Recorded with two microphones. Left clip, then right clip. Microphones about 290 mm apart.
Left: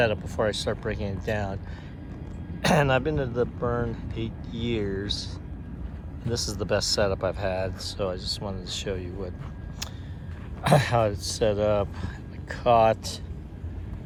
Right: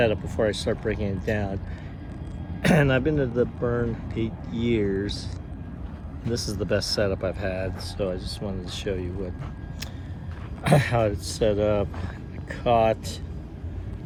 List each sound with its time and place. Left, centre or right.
0.0 s speech: centre
2.6 s speech: centre
4.7 s speech: left
6.2 s speech: centre
10.6 s speech: centre